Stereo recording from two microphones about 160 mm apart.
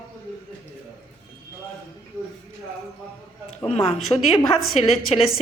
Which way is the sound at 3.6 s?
40° left (ahead or behind).